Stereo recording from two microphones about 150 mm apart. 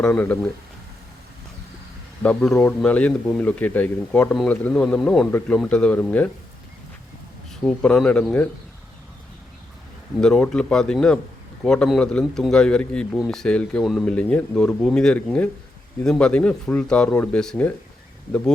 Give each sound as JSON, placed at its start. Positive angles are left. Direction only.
{"t": 0.0, "sound": "a man's voice", "side_deg": 10}
{"t": 2.2, "sound": "a man's voice", "side_deg": 5}
{"t": 7.5, "sound": "a man's voice", "side_deg": 5}
{"t": 10.2, "sound": "a man's voice", "side_deg": 5}